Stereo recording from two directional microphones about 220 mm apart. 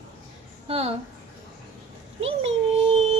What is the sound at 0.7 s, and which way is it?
Speech, 25° right (ahead or behind).